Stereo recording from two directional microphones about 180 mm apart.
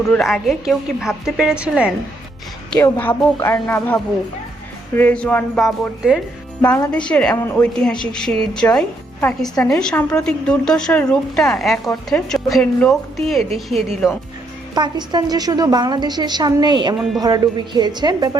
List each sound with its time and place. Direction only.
0.1 s a woman's voice: centre (ahead or behind)
2.6 s a woman's voice: 10° left (ahead or behind)
6.7 s a woman's voice: 10° left (ahead or behind)
14.8 s a woman's voice: 25° right (ahead or behind)